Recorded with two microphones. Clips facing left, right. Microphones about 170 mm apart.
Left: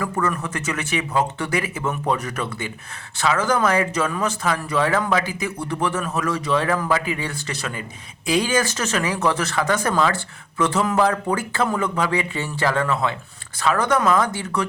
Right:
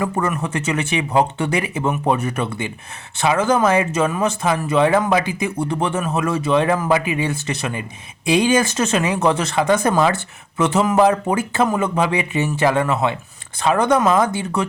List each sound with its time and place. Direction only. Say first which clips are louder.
0.0 s speech: right 3 dB; 25° right (ahead or behind)
8.7 s speech: right 5 dB; 25° right (ahead or behind)